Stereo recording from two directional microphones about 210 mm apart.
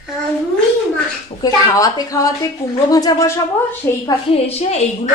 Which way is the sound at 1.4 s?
15° left (ahead or behind).